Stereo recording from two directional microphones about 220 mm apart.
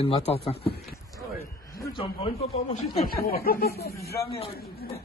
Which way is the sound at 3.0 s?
40° left (ahead or behind).